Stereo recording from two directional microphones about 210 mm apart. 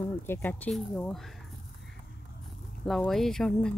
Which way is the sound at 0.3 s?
10° left (ahead or behind).